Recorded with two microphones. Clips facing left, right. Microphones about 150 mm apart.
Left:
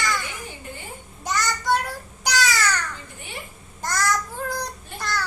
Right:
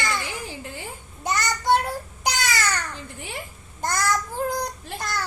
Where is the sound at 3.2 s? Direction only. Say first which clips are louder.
Right 4 dB; 90° right.